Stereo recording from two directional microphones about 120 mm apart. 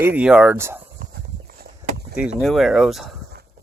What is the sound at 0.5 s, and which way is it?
Speech, 20° right (ahead or behind).